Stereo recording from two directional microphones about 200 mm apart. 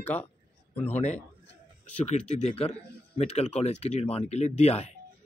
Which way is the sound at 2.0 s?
30° left (ahead or behind).